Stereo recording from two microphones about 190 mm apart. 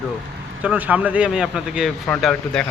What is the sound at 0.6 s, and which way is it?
A man's voice, 5° right (ahead or behind).